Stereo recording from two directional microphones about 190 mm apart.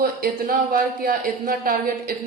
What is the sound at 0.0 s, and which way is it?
Speech, 50° right (ahead or behind).